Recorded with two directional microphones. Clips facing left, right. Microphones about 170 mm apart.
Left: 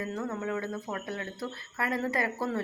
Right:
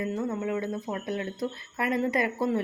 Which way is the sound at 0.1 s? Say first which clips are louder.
Right 3 dB; 15° right (ahead or behind).